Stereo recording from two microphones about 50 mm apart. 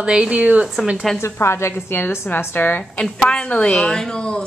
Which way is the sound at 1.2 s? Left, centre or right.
Left.